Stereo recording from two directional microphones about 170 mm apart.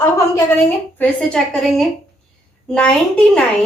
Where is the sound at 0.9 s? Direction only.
10° left (ahead or behind).